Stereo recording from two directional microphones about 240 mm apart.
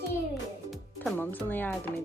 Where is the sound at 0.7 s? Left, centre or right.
Centre.